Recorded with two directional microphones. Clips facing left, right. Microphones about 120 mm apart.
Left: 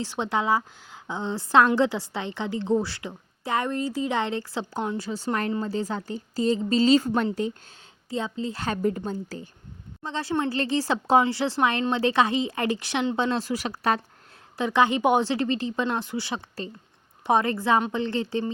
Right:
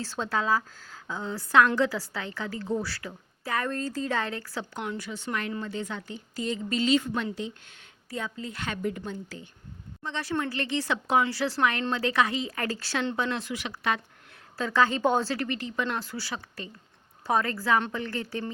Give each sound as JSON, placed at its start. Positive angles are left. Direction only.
{"t": 0.0, "sound": "a woman's voice", "side_deg": 20}
{"t": 8.1, "sound": "a woman's voice", "side_deg": 25}
{"t": 14.6, "sound": "a woman's voice", "side_deg": 20}